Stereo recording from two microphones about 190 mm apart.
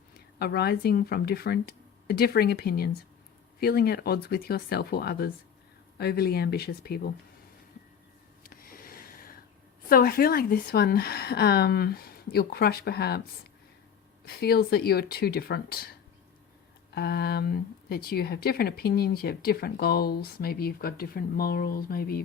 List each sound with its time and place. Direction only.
0.3 s a woman's voice: 55° left (ahead or behind)
8.4 s a sound: 50° left (ahead or behind)
9.9 s a woman's voice: 50° left (ahead or behind)